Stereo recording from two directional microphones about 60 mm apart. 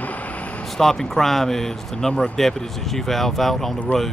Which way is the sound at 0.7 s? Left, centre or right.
Centre.